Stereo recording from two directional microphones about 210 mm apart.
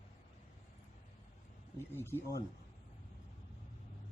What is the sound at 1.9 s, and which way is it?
Speech, 10° left (ahead or behind).